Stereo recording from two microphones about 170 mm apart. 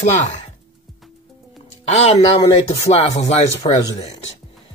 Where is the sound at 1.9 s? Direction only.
40° left (ahead or behind).